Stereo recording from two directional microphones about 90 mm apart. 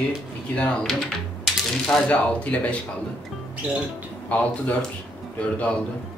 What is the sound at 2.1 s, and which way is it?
Speech, 15° left (ahead or behind).